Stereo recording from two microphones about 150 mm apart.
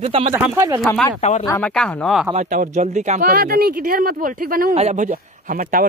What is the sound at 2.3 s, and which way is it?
Speech, 50° right (ahead or behind).